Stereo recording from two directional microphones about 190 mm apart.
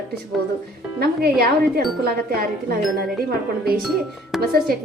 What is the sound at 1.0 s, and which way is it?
Speech, 55° right (ahead or behind).